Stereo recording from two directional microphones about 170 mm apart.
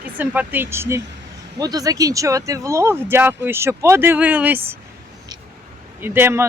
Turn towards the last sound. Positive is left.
turn(degrees=-15)  # may be behind; listen again after turning